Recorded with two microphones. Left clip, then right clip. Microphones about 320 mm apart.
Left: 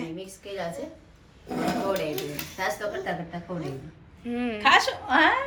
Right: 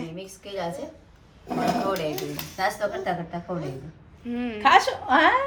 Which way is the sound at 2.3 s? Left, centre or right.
Centre.